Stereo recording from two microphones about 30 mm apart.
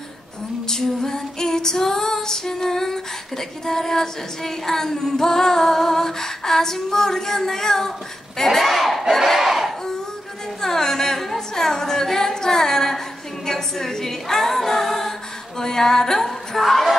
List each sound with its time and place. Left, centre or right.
0.7 s female singing: centre
8.4 s speech: centre
9.5 s a sound: centre
10.6 s a sound: centre
13.5 s singing: centre
15.6 s music: centre